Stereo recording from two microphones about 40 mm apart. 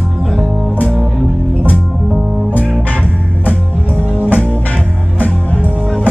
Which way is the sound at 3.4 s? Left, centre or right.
Left.